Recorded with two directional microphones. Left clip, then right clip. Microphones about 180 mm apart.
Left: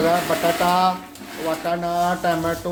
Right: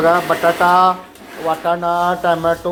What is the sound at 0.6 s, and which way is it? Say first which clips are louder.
Speech: right 7 dB; 10° right (ahead or behind).